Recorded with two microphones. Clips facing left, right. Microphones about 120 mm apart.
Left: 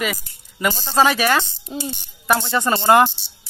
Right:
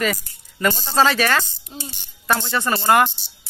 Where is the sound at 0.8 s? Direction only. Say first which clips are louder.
Left 2 dB; 15° left (ahead or behind).